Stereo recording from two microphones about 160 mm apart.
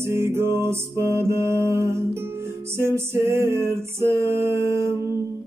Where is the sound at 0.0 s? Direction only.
15° right (ahead or behind).